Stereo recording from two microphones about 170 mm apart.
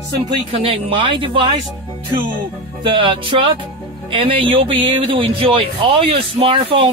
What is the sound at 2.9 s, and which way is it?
A man's voice, 30° right (ahead or behind).